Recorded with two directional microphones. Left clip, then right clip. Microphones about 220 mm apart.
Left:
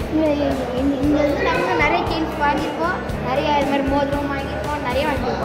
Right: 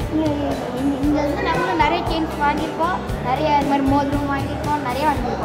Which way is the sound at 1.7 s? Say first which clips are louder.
Even; 30° right (ahead or behind).